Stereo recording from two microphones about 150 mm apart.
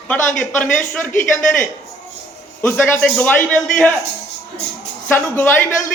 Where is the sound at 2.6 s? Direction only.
15° left (ahead or behind).